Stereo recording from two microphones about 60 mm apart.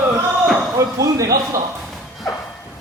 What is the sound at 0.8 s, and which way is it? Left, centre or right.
Speech, right.